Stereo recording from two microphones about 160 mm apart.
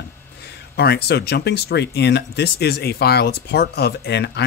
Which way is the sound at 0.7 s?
90° left.